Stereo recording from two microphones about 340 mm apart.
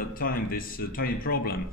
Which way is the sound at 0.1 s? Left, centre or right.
Left.